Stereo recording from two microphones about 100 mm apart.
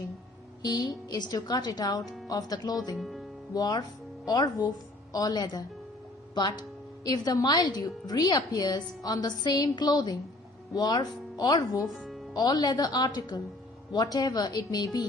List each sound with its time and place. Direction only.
0.6 s a woman's voice: 40° left (ahead or behind)
2.9 s speech: centre (ahead or behind)
3.5 s a woman's voice: 40° left (ahead or behind)
11.9 s music: centre (ahead or behind)
12.3 s speech: 40° left (ahead or behind)